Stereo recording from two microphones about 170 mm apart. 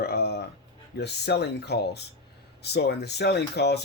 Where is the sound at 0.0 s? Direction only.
70° left (ahead or behind).